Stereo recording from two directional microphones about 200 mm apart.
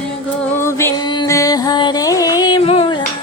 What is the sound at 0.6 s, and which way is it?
Music, 15° left (ahead or behind).